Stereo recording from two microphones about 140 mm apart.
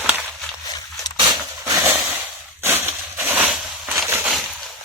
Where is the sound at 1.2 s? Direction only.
30° right (ahead or behind).